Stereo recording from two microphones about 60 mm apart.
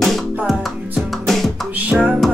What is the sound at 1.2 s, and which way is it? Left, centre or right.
Music, centre.